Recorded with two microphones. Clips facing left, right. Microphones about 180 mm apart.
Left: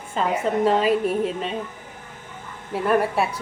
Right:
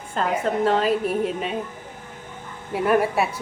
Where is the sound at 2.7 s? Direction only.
5° right (ahead or behind).